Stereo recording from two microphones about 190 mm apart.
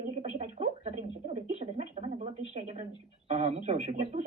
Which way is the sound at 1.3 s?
35° right (ahead or behind).